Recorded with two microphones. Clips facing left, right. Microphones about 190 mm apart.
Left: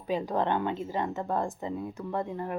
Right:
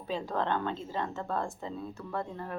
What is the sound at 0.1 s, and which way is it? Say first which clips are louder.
Speech: left 4 dB; 15° left (ahead or behind).